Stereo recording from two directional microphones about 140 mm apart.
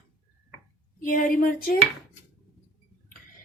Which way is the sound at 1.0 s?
70° left (ahead or behind).